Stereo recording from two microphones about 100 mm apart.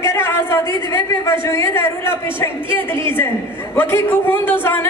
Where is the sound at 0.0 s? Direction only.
25° left (ahead or behind).